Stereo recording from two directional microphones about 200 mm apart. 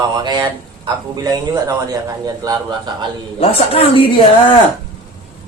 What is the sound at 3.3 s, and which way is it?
Speech, 30° left (ahead or behind).